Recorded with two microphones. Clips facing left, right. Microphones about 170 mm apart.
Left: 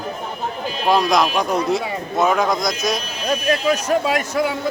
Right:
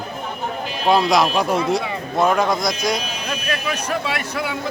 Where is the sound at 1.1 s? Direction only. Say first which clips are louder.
Right 1 dB; centre (ahead or behind).